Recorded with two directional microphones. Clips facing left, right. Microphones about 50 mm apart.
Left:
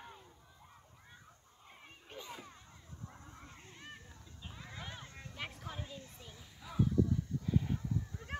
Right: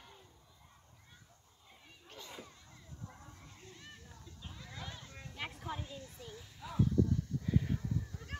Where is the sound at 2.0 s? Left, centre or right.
Centre.